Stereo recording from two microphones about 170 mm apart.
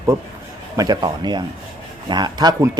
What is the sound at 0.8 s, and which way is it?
Speech, 25° right (ahead or behind).